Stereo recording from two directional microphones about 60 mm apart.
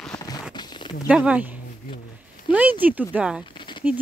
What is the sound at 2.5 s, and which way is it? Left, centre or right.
Speech, right.